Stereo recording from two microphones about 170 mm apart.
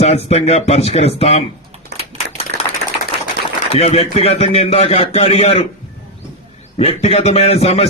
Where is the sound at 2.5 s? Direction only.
75° right (ahead or behind).